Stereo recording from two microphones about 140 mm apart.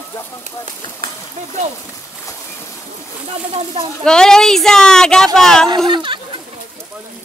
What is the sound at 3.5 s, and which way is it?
Speech, 45° right (ahead or behind).